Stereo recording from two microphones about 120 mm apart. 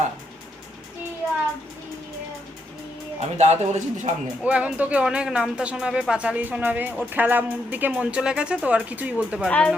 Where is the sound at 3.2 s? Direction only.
70° right (ahead or behind).